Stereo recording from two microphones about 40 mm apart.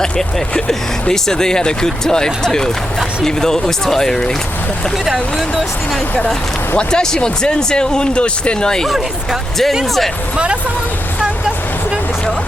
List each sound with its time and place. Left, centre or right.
0.0 s speech: centre
5.0 s speech: centre
6.7 s speech: centre
10.3 s speech: right